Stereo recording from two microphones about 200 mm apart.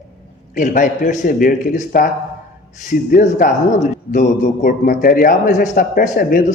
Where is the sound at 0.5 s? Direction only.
40° left (ahead or behind).